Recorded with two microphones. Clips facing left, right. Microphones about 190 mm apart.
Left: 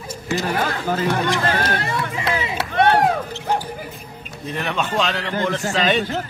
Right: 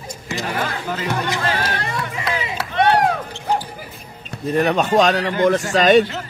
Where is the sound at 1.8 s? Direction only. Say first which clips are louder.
Left 1 dB; 25° left (ahead or behind).